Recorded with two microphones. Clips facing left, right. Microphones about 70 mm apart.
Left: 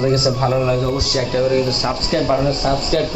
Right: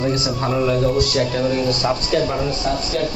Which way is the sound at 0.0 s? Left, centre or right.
Centre.